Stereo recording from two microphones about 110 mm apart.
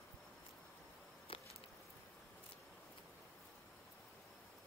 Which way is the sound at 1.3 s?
55° left (ahead or behind).